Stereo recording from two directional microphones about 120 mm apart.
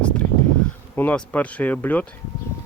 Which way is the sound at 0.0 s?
10° left (ahead or behind).